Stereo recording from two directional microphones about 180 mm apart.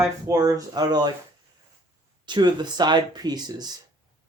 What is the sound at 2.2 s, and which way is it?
Speech, 25° right (ahead or behind).